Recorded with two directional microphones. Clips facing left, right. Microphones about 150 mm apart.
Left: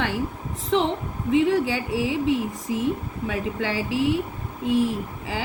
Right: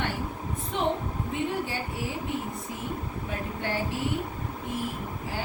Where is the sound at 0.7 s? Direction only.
90° left.